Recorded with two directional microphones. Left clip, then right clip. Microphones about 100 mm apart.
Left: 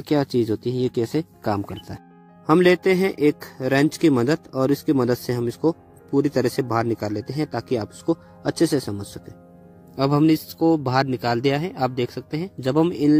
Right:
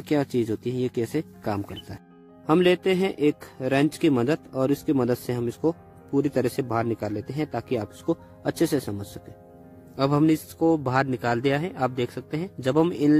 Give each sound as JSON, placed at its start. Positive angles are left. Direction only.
{"t": 0.0, "sound": "speech", "side_deg": 30}
{"t": 9.9, "sound": "a man's voice", "side_deg": 50}